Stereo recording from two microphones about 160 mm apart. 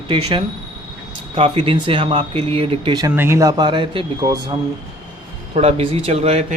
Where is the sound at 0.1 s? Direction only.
30° right (ahead or behind).